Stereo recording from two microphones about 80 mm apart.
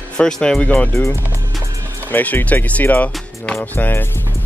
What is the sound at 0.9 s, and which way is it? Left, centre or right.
Speech, left.